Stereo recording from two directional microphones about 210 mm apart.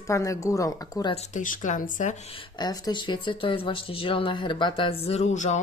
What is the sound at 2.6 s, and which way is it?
Speech, 20° left (ahead or behind).